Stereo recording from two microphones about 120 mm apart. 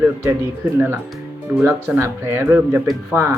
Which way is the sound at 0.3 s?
15° right (ahead or behind).